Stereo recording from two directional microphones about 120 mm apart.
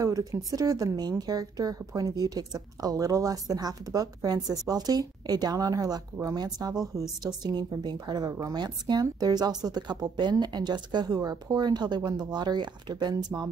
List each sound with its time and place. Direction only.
0.0 s speech: 30° right (ahead or behind)